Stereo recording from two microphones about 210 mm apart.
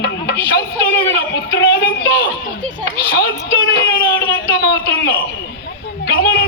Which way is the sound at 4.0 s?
15° left (ahead or behind).